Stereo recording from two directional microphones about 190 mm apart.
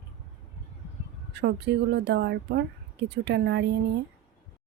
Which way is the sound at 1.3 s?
65° right (ahead or behind).